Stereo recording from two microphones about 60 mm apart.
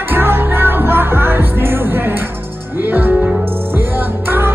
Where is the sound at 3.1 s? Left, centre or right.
Centre.